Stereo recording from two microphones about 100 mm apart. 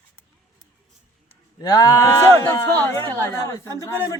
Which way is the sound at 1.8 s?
30° left (ahead or behind).